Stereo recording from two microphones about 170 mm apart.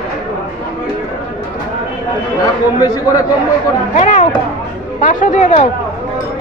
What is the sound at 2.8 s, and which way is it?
Speech, 20° left (ahead or behind).